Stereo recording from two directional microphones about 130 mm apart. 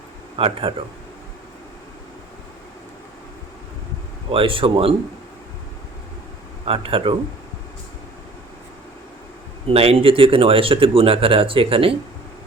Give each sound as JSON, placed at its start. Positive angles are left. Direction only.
{"t": 0.3, "sound": "speech", "side_deg": -45}
{"t": 4.3, "sound": "speech", "side_deg": -40}
{"t": 6.7, "sound": "speech", "side_deg": -45}
{"t": 9.6, "sound": "speech", "side_deg": -50}